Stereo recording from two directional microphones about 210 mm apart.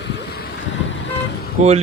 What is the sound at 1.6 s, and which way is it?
Speech, 30° right (ahead or behind).